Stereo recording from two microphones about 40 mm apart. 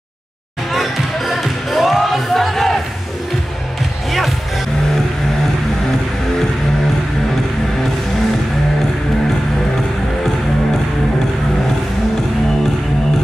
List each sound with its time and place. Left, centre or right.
0.7 s music: centre